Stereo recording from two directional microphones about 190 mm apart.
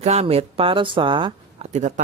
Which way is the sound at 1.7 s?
40° right (ahead or behind).